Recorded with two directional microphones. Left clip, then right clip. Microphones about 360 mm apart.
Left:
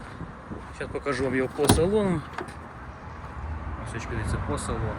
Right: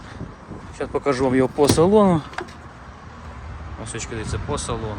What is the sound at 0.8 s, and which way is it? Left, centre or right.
Speech, centre.